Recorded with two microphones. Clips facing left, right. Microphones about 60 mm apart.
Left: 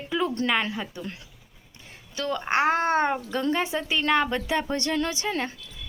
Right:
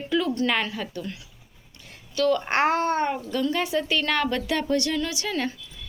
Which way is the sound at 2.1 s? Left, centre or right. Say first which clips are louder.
Right 7 dB; left.